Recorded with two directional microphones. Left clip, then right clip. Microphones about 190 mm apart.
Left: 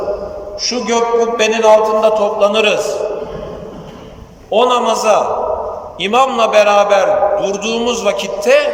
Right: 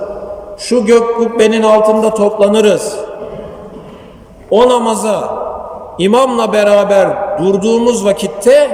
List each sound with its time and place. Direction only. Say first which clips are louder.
0.7 s a man's voice: right 5 dB; 30° right (ahead or behind)
4.5 s a man's voice: right 3 dB; 30° right (ahead or behind)